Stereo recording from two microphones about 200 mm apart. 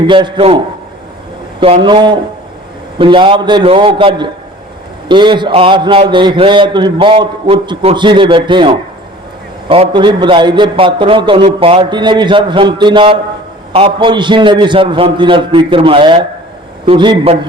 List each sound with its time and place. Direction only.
0.1 s a man's voice: 25° right (ahead or behind)
1.6 s a man's voice: 25° right (ahead or behind)